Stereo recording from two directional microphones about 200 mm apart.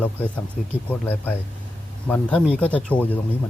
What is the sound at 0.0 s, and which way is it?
Speech, 10° left (ahead or behind).